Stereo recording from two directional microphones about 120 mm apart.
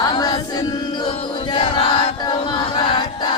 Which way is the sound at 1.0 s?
45° left (ahead or behind).